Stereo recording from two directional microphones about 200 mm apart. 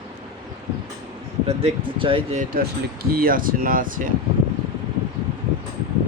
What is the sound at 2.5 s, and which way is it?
Speech, 45° right (ahead or behind).